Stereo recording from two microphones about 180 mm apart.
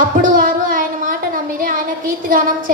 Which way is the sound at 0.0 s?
50° right (ahead or behind).